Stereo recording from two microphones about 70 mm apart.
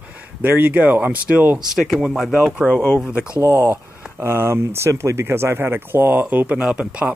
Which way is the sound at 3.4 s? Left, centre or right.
Right.